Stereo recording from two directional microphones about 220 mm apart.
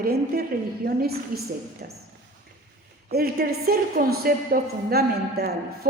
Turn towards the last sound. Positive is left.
turn(degrees=-45)  # may be behind; listen again after turning